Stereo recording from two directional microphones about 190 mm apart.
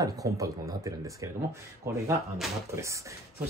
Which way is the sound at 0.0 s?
15° right (ahead or behind).